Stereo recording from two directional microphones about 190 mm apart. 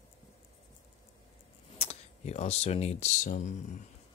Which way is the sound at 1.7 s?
35° left (ahead or behind).